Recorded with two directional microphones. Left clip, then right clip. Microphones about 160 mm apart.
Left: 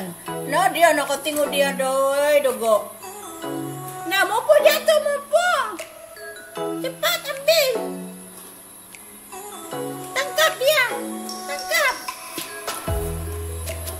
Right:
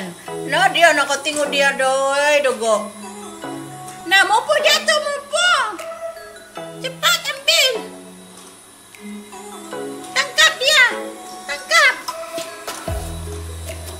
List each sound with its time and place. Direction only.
0.5 s a woman's voice: 15° left (ahead or behind)
4.1 s a sound: centre (ahead or behind)
6.8 s music: centre (ahead or behind)
10.1 s music: 5° left (ahead or behind)